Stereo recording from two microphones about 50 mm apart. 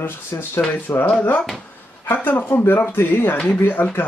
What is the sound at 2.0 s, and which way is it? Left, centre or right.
Speech, left.